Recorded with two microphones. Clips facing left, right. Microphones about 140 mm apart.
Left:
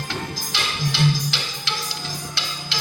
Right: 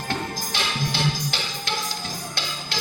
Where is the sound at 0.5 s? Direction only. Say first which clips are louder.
Left 2 dB; 50° right (ahead or behind).